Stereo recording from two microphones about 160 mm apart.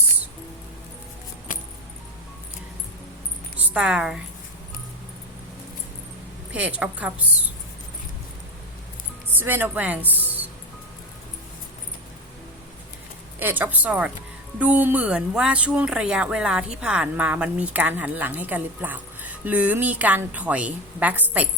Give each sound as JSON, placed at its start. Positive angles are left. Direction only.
{"t": 1.5, "sound": "keys jangling", "side_deg": 55}
{"t": 3.6, "sound": "a woman's voice", "side_deg": -5}
{"t": 6.5, "sound": "speech", "side_deg": -10}
{"t": 9.4, "sound": "speech", "side_deg": -10}
{"t": 13.4, "sound": "speech", "side_deg": -10}